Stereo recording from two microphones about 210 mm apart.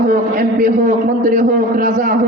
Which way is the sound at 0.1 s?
40° right (ahead or behind).